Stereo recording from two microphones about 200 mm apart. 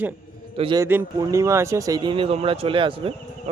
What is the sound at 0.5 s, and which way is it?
Speech, 25° right (ahead or behind).